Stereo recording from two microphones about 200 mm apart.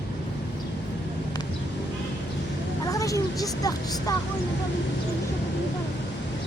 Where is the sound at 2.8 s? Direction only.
15° left (ahead or behind).